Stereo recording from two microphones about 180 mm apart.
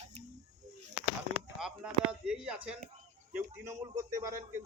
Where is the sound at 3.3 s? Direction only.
15° right (ahead or behind).